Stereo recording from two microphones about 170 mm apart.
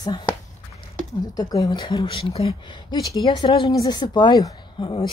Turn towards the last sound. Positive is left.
turn(degrees=30)  # may be behind; listen again after turning